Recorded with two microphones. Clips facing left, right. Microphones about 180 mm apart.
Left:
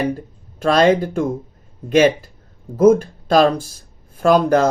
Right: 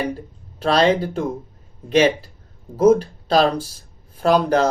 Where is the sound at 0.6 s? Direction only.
45° left (ahead or behind).